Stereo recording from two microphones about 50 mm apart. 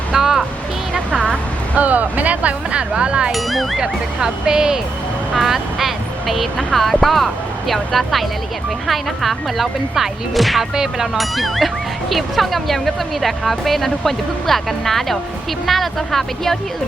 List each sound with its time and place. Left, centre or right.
0.1 s music: centre
1.7 s speech: right
3.3 s speech: centre
3.8 s speech: centre
5.4 s speech: centre